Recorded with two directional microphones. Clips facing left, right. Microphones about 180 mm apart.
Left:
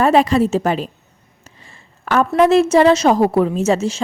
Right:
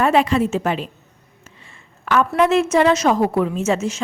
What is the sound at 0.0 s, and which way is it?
Speech, 35° left (ahead or behind).